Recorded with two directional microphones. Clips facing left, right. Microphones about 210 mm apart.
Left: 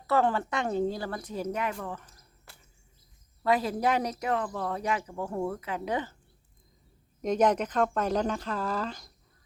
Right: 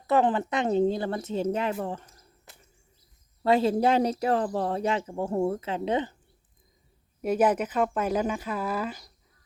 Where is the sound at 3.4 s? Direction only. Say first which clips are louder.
Right 4 dB; 25° right (ahead or behind).